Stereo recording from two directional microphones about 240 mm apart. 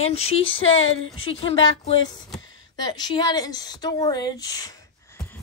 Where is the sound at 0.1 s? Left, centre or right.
Left.